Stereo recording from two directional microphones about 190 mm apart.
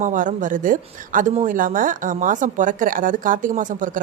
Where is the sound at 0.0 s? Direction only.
40° right (ahead or behind).